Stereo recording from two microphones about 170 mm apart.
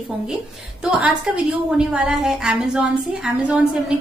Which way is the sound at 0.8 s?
5° right (ahead or behind).